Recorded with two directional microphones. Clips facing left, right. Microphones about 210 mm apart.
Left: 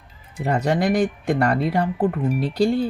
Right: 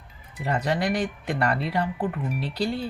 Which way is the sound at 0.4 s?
45° left (ahead or behind).